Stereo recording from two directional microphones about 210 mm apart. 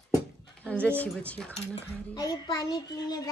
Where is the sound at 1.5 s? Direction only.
30° left (ahead or behind).